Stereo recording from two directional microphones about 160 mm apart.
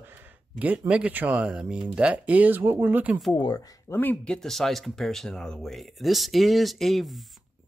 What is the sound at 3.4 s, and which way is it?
Speech, 25° left (ahead or behind).